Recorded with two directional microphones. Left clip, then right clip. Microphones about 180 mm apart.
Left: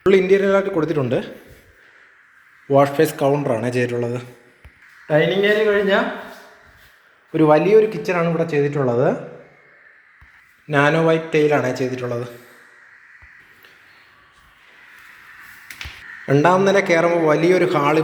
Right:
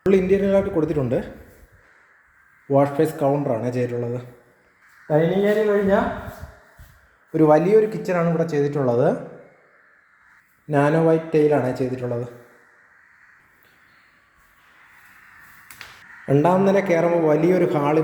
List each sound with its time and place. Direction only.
0.1 s a man's voice: 10° right (ahead or behind)
2.6 s speech: 5° right (ahead or behind)
7.3 s a man's voice: 10° right (ahead or behind)
10.7 s a man's voice: 25° right (ahead or behind)
16.3 s a man's voice: 15° right (ahead or behind)